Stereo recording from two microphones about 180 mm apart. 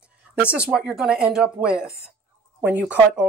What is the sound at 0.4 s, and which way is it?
Speech, 5° right (ahead or behind).